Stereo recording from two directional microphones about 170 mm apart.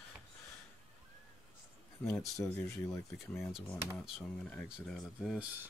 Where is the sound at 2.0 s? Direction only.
5° left (ahead or behind).